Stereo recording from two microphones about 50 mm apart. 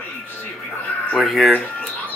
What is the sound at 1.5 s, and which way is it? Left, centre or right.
Speech, left.